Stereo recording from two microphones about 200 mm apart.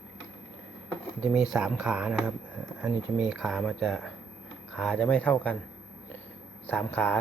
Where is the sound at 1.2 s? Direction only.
5° right (ahead or behind).